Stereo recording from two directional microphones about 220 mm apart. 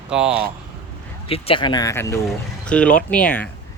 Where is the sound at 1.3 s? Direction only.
25° left (ahead or behind); by 3.5 s 5° left (ahead or behind).